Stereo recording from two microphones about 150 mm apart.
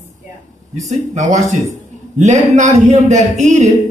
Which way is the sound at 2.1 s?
55° right (ahead or behind).